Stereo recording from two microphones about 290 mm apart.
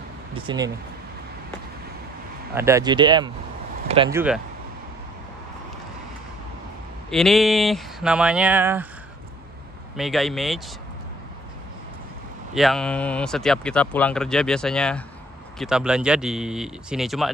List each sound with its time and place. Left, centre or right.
0.3 s speech: centre
2.5 s speech: centre
4.1 s speech: centre
7.1 s speech: centre
9.9 s speech: centre
12.5 s speech: centre